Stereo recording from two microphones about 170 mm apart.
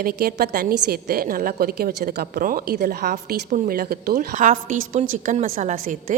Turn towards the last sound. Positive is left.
turn(degrees=-50)  # may be behind; listen again after turning